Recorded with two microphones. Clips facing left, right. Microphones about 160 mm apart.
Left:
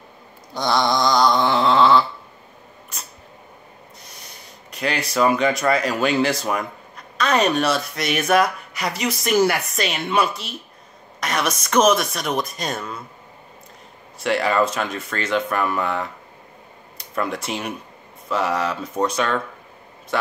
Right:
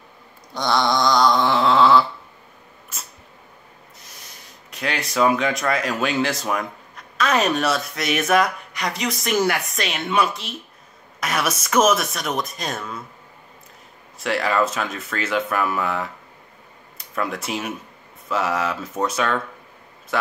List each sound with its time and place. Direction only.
0.6 s a sound: centre (ahead or behind)
4.0 s speech: centre (ahead or behind)
14.1 s speech: centre (ahead or behind)